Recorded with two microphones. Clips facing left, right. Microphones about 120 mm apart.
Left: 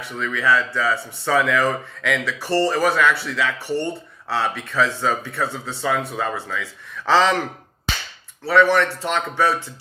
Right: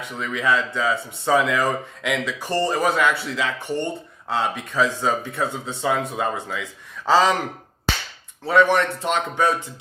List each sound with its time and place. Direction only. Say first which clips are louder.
0.0 s speech: left 1 dB; 20° right (ahead or behind)
8.4 s speech: left 1 dB; 20° right (ahead or behind)